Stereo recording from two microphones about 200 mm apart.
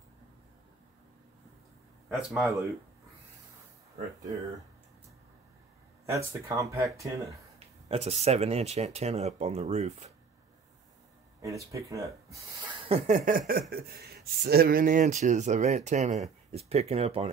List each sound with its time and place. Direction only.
2.0 s speech: centre (ahead or behind)
6.0 s speech: 15° right (ahead or behind)
7.5 s speech: 30° right (ahead or behind)
11.4 s speech: 15° right (ahead or behind)
12.8 s speech: 30° right (ahead or behind)